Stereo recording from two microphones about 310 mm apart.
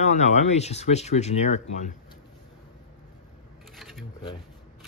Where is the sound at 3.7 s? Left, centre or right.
Centre.